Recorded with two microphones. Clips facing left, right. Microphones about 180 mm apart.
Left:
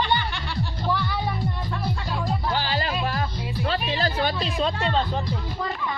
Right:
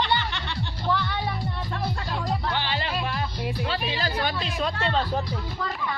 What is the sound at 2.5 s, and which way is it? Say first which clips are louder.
Music: left 3 dB; 40° left (ahead or behind).